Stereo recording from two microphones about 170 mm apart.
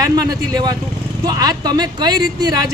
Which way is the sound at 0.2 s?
25° right (ahead or behind).